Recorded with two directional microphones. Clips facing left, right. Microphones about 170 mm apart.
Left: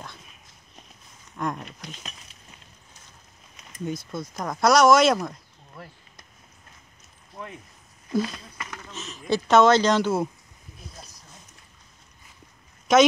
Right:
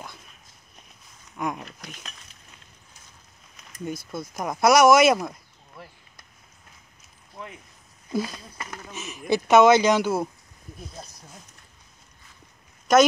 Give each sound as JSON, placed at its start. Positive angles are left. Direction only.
{"t": 1.3, "sound": "speech", "side_deg": -5}
{"t": 4.1, "sound": "speech", "side_deg": -5}
{"t": 8.1, "sound": "speech", "side_deg": -10}
{"t": 8.5, "sound": "speech", "side_deg": -35}
{"t": 8.8, "sound": "speech", "side_deg": -10}
{"t": 12.9, "sound": "speech", "side_deg": 0}